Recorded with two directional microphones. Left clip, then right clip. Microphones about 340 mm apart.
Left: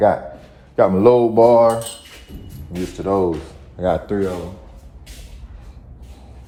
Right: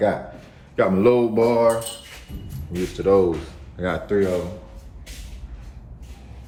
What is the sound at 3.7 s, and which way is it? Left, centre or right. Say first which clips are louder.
Speech: left 4 dB; centre.